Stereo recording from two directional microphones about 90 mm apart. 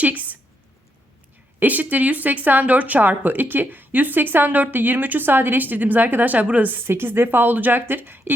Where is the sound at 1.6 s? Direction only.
20° right (ahead or behind).